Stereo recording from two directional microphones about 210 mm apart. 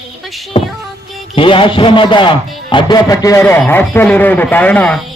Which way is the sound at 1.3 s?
25° left (ahead or behind).